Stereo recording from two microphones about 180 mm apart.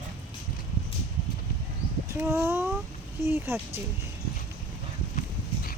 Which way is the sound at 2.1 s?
15° right (ahead or behind).